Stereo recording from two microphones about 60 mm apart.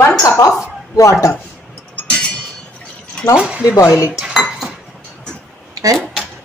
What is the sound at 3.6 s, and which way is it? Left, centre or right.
Speech, left.